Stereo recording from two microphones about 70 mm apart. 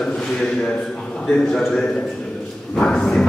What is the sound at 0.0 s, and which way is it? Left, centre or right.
A man's voice, centre.